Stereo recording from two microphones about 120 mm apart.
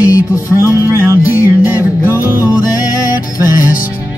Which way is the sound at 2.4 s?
30° left (ahead or behind).